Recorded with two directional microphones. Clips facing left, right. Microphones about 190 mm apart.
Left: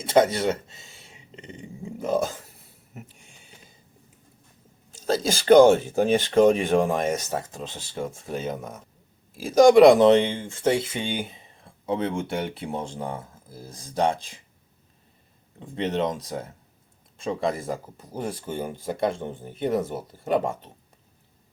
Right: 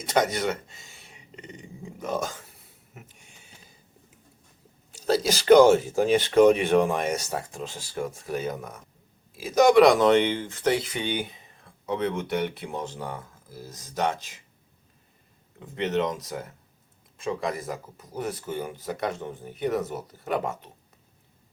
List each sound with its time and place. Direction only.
0.1 s speech: 30° left (ahead or behind)
4.9 s speech: 30° left (ahead or behind)
7.3 s speech: 20° left (ahead or behind)
9.7 s speech: 30° left (ahead or behind)
15.6 s speech: 30° left (ahead or behind)